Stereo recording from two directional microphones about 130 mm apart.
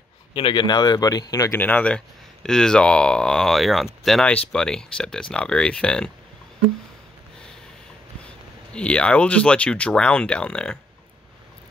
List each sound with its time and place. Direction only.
0.3 s speech: 40° left (ahead or behind); by 1.6 s 25° left (ahead or behind)
1.6 s speech: 10° left (ahead or behind)
8.7 s speech: 10° left (ahead or behind)